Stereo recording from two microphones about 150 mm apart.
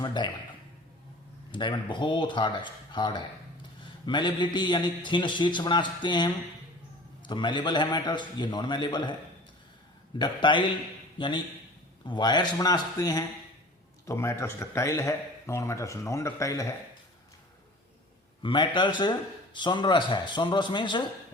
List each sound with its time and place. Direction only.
0.0 s speech: 30° left (ahead or behind)
1.5 s a man's voice: 30° left (ahead or behind)
10.2 s a man's voice: 30° left (ahead or behind)
18.4 s a man's voice: 30° left (ahead or behind)